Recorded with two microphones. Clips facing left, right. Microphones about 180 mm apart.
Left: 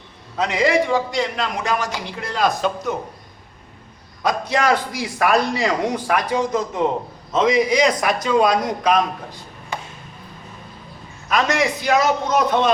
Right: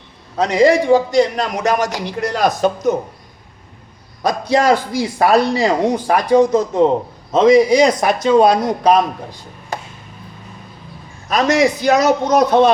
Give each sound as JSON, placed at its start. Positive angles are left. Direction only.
{"t": 0.3, "sound": "a man's voice", "side_deg": -40}
{"t": 4.2, "sound": "a man's voice", "side_deg": -35}
{"t": 9.7, "sound": "chop", "side_deg": -40}
{"t": 11.3, "sound": "a man's voice", "side_deg": -40}